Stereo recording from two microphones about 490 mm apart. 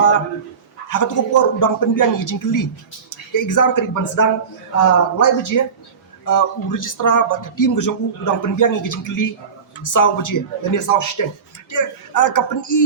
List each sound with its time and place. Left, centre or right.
0.9 s speech: left